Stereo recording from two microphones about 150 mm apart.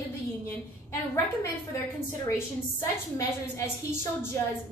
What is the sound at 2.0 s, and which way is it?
A woman's voice, 15° left (ahead or behind).